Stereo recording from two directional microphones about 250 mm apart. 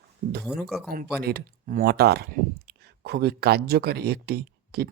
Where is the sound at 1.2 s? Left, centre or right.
Right.